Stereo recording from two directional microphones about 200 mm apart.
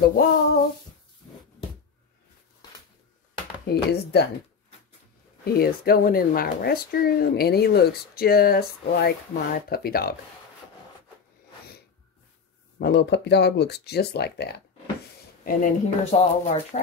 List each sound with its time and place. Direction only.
0.0 s speech: 50° left (ahead or behind)
3.6 s speech: 55° left (ahead or behind)
5.4 s speech: 50° left (ahead or behind)
12.7 s speech: 55° left (ahead or behind)
16.1 s speech: 35° left (ahead or behind)